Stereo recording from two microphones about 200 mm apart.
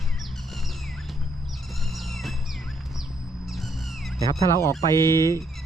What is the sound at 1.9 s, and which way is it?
Music, centre (ahead or behind).